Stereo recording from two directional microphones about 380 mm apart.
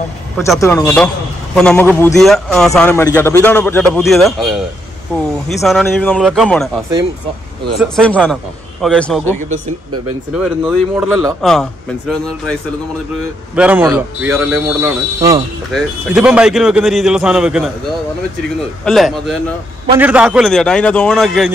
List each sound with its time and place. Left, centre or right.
0.4 s speech: centre
7.8 s speech: centre
13.6 s speech: centre
18.9 s speech: centre